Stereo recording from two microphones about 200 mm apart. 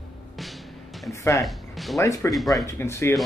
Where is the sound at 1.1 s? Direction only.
15° left (ahead or behind).